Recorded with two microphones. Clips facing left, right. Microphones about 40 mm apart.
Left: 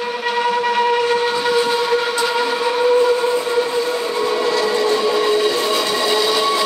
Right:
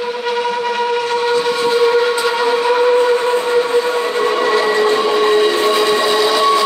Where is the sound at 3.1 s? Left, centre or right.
Right.